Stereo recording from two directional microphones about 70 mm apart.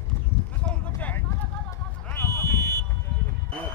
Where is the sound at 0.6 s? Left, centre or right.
Left.